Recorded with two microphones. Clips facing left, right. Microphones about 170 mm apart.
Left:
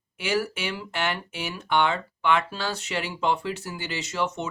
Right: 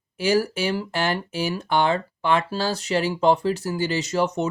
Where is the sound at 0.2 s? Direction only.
35° right (ahead or behind).